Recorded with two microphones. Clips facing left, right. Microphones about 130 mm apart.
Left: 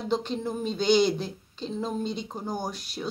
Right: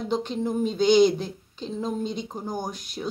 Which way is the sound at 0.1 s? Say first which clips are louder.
Right 2 dB; 15° right (ahead or behind).